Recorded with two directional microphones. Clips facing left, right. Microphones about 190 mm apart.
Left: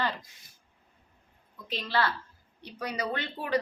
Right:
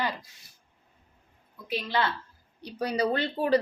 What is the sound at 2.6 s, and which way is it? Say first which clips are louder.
Speech: right 7 dB; 35° right (ahead or behind).